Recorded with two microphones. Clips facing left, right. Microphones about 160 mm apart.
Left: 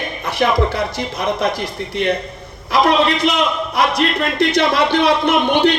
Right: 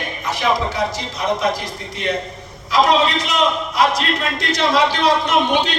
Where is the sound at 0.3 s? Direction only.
60° left (ahead or behind).